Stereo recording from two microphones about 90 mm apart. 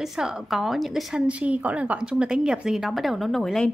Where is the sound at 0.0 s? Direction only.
5° right (ahead or behind).